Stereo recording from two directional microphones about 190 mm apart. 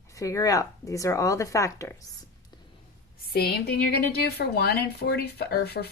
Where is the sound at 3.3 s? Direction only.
55° left (ahead or behind).